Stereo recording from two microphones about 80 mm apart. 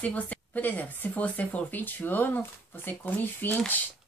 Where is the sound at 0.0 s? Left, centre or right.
Centre.